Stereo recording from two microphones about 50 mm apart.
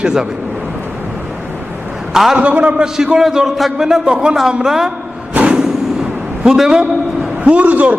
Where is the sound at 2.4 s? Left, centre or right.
Right.